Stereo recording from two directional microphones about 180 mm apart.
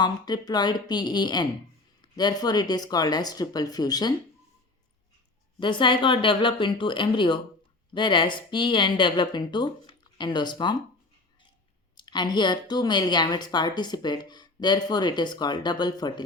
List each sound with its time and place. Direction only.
0.0 s a woman's voice: 25° left (ahead or behind)
5.5 s a woman's voice: 25° left (ahead or behind)
11.9 s a woman's voice: 25° left (ahead or behind)